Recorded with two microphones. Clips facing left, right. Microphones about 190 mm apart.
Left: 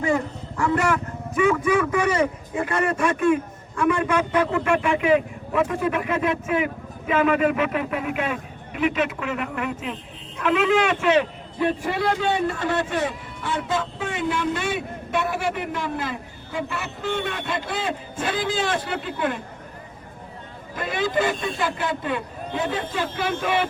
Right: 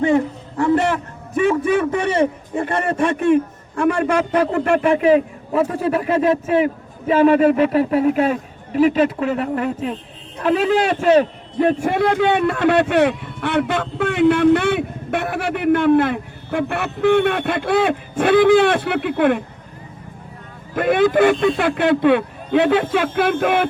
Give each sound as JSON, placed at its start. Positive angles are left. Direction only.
{"t": 0.0, "sound": "a man's voice", "side_deg": -25}
{"t": 20.7, "sound": "a man's voice", "side_deg": -60}
{"t": 23.0, "sound": "a man's voice", "side_deg": -55}